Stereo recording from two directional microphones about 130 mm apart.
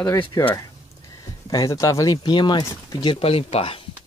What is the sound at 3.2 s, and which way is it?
Speech, 50° left (ahead or behind).